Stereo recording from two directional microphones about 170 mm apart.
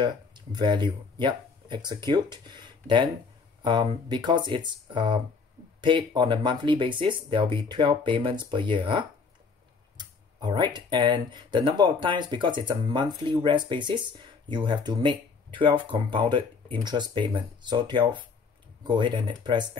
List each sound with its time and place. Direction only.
0.0 s speech: 25° right (ahead or behind)